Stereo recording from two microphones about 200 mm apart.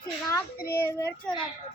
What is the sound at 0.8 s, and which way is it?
Speech, 15° left (ahead or behind).